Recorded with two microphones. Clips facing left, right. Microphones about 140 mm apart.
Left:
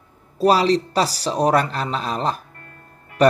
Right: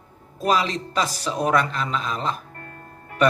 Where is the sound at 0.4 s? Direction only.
35° left (ahead or behind).